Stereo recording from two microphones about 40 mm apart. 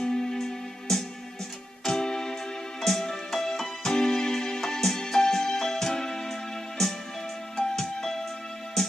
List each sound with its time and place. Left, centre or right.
0.0 s music: centre
7.5 s music: centre